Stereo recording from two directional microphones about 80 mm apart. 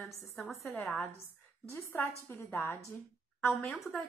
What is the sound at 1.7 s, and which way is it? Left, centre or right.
A woman's voice, left.